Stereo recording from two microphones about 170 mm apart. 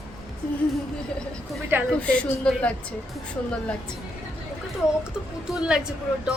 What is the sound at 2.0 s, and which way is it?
Speech, 5° left (ahead or behind).